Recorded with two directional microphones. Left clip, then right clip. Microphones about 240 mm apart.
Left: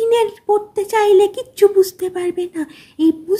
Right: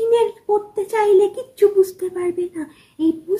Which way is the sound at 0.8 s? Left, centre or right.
Left.